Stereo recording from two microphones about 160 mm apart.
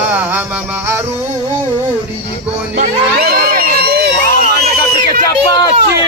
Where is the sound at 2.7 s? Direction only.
70° right (ahead or behind).